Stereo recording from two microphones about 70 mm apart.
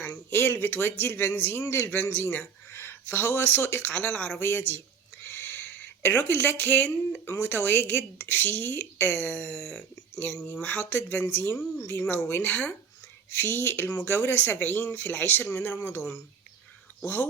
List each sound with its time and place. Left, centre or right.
0.0 s speech: left
1.6 s a man's voice: left
2.2 s speech: left
4.4 s speech: left
9.5 s speech: centre
10.6 s speech: left
12.4 s speech: left
13.3 s speech: left